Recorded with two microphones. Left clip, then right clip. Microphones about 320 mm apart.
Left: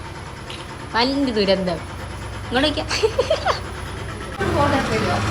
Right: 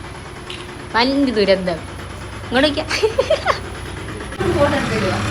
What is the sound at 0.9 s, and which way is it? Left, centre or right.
A woman's voice, centre.